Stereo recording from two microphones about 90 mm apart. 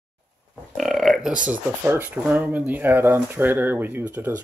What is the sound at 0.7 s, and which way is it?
Burping, centre (ahead or behind).